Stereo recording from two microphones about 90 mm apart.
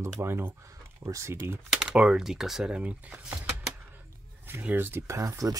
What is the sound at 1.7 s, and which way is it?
Speech, 5° right (ahead or behind).